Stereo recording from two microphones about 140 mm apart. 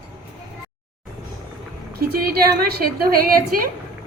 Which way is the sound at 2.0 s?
90° right.